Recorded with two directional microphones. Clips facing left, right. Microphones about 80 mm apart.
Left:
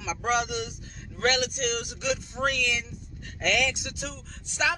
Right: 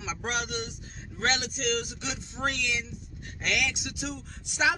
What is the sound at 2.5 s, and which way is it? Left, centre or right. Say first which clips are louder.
Speech: left 3 dB; right.